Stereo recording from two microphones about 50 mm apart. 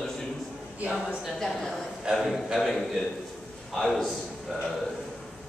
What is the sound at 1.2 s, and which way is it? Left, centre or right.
Speech, centre.